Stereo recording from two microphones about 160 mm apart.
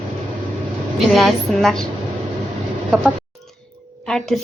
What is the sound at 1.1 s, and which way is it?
Speech, centre (ahead or behind).